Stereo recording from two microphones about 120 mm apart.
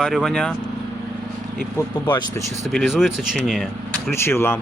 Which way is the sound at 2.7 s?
Centre (ahead or behind).